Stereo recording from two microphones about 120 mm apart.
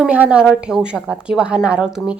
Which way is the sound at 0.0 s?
10° right (ahead or behind).